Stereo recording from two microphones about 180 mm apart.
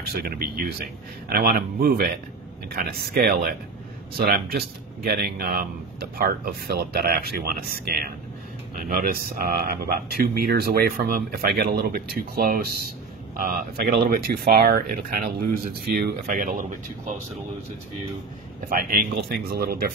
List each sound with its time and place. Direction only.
0.1 s speech: 55° right (ahead or behind)
18.7 s speech: 55° right (ahead or behind)